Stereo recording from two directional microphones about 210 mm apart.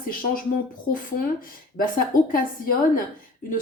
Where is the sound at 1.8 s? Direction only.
45° left (ahead or behind).